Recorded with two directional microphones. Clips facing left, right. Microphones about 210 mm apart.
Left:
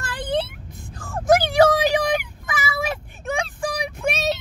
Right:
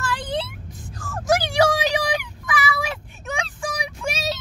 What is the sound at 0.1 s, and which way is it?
Vehicle, 55° left (ahead or behind).